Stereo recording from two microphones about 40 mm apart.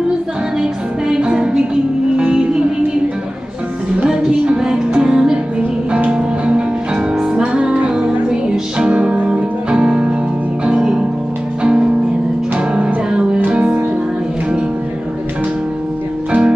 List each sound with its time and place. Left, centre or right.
0.6 s music: centre
4.1 s music: centre
16.3 s music: right